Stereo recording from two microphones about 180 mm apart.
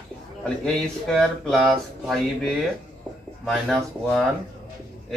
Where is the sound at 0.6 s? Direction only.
5° left (ahead or behind).